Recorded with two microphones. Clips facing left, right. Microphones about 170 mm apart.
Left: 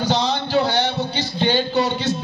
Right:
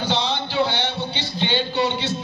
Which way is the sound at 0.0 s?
40° left (ahead or behind).